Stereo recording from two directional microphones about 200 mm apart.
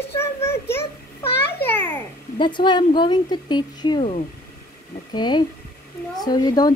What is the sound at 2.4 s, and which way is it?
A woman's voice, 20° left (ahead or behind).